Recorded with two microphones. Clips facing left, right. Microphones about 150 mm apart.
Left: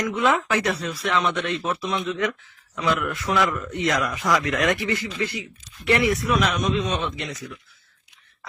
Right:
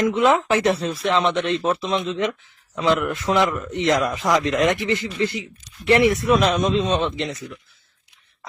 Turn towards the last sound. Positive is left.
turn(degrees=-25)  # may be behind; listen again after turning